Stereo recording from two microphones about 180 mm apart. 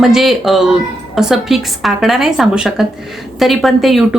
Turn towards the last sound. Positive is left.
turn(degrees=0)  # may be behind; listen again after turning